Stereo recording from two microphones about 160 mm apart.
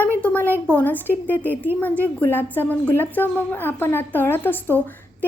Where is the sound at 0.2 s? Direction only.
10° left (ahead or behind).